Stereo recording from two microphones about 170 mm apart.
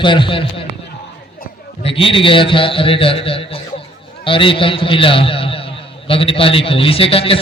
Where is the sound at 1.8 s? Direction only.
30° left (ahead or behind).